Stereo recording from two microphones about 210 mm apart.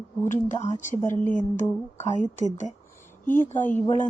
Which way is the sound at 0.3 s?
35° left (ahead or behind).